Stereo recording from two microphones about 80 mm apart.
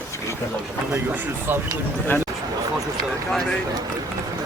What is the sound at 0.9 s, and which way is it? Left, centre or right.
Speech, right.